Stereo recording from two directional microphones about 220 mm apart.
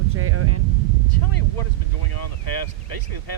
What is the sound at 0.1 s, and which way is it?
Speech, 75° right (ahead or behind).